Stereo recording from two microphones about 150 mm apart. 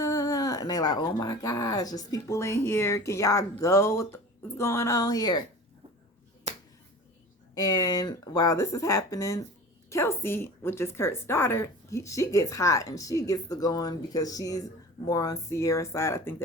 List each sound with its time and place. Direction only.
0.0 s speech: 25° left (ahead or behind)
6.5 s finger snapping: 50° right (ahead or behind)
7.5 s speech: 25° left (ahead or behind)